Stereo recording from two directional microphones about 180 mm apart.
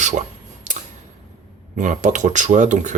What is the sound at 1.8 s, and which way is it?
Speech, 45° right (ahead or behind).